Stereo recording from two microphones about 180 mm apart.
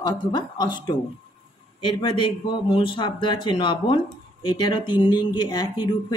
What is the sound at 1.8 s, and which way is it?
Speech, 25° left (ahead or behind).